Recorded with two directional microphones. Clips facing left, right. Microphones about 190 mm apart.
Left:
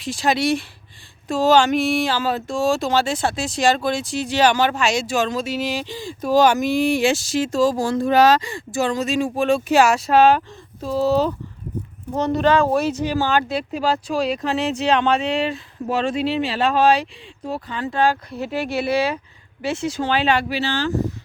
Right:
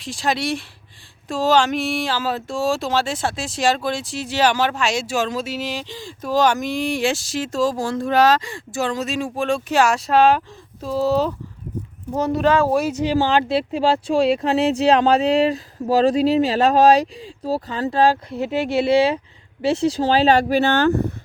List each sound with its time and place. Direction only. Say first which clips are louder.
0.0 s speech: left 3 dB; centre (ahead or behind)
13.1 s speech: right 2 dB; 30° right (ahead or behind)
18.3 s speech: right 3 dB; 20° right (ahead or behind); by 21.1 s 60° right (ahead or behind)